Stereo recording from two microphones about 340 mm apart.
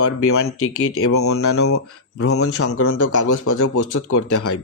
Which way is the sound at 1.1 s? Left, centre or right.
Left.